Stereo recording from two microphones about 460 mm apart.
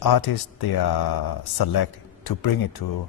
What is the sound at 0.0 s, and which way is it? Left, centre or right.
A man's voice, left.